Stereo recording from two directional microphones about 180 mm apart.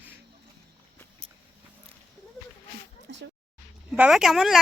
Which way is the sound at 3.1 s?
70° right (ahead or behind).